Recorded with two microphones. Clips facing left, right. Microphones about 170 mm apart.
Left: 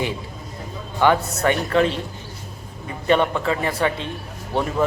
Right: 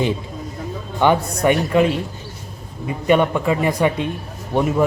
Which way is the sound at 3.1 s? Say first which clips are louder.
Right 3 dB; 10° right (ahead or behind).